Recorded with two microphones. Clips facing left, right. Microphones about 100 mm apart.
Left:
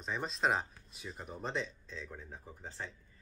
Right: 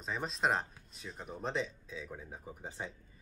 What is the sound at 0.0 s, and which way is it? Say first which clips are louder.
Speech: even; centre (ahead or behind).